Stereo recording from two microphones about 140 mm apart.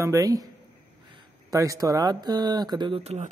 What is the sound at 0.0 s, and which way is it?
Speech, 25° right (ahead or behind).